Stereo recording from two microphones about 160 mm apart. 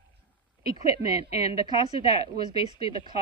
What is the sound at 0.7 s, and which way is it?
A woman's voice, 20° right (ahead or behind).